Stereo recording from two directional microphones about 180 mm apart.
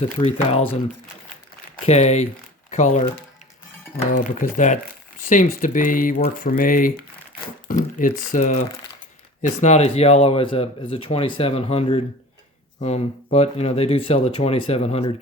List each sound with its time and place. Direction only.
0.2 s speech: 35° left (ahead or behind)
1.9 s speech: 40° left (ahead or behind)
4.0 s speech: 45° left (ahead or behind)